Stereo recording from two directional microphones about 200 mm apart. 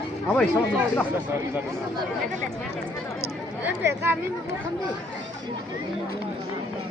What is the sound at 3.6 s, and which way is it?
Speech, 10° right (ahead or behind).